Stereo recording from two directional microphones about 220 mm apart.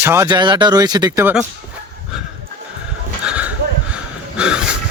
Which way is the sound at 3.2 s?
5° right (ahead or behind).